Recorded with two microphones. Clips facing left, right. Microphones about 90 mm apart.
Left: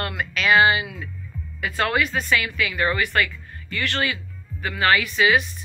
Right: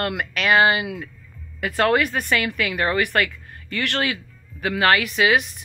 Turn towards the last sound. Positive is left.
turn(degrees=-60)  # may be behind; listen again after turning